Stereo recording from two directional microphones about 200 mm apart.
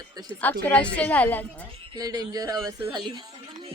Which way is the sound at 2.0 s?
20° right (ahead or behind).